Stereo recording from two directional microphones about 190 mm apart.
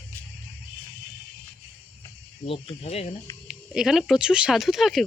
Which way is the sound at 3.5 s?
Centre (ahead or behind).